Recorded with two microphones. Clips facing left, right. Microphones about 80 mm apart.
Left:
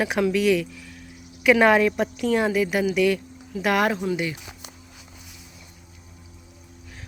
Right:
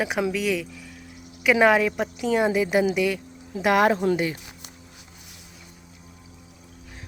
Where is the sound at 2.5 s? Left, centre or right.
Right.